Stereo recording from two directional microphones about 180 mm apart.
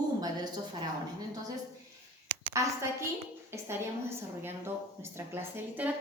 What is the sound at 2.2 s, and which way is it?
A woman's voice, 10° right (ahead or behind).